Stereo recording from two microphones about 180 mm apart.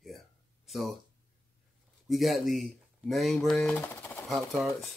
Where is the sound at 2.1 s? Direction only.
Centre (ahead or behind).